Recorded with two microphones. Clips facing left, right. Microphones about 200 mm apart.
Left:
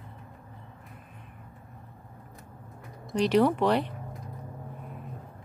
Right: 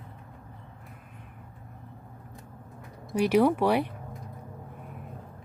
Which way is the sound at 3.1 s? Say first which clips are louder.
Right 1 dB; 10° right (ahead or behind).